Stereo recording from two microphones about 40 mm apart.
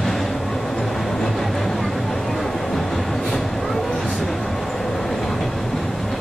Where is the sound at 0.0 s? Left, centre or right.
Centre.